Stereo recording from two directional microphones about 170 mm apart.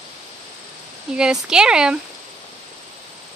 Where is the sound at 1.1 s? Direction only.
5° right (ahead or behind).